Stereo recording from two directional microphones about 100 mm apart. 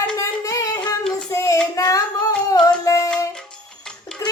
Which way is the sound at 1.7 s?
35° left (ahead or behind).